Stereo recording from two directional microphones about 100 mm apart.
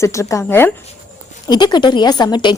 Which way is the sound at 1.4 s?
45° left (ahead or behind).